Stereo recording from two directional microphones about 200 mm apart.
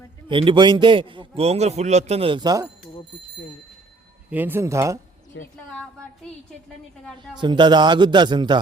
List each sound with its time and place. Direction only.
0.3 s a man's voice: 25° right (ahead or behind)
4.3 s speech: 10° right (ahead or behind)
5.3 s speech: 65° left (ahead or behind)
7.3 s a man's voice: 20° right (ahead or behind)